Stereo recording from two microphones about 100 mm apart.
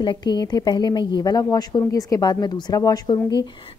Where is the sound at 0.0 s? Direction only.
45° left (ahead or behind).